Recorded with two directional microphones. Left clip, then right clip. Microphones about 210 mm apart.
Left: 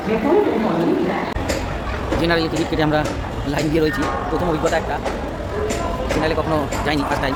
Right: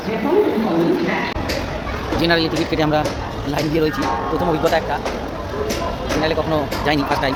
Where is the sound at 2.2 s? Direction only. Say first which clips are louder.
Right 2 dB; 5° right (ahead or behind).